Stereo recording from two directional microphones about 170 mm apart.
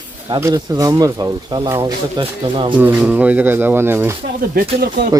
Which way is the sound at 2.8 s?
10° right (ahead or behind).